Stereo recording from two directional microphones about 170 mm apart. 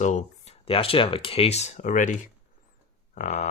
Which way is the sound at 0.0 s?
45° left (ahead or behind).